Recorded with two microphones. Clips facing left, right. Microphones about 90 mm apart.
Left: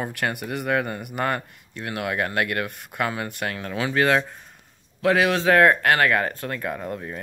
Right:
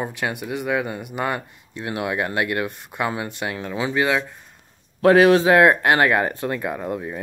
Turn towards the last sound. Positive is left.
turn(degrees=-15)  # may be behind; listen again after turning